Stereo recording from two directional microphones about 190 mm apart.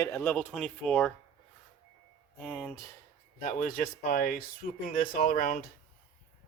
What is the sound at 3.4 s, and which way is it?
Speech, 45° left (ahead or behind).